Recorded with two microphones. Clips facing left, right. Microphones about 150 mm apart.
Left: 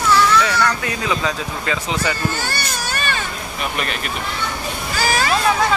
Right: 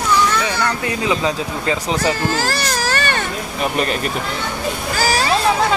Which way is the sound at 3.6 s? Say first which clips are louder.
Right 5 dB; 35° right (ahead or behind).